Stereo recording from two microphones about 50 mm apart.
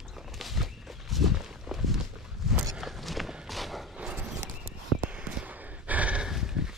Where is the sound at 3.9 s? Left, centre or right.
Centre.